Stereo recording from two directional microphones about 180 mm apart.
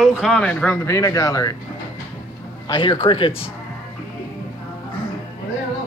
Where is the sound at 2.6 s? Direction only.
25° left (ahead or behind).